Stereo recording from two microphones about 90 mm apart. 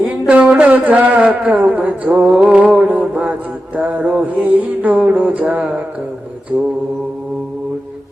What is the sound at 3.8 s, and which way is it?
Mantra, 15° right (ahead or behind).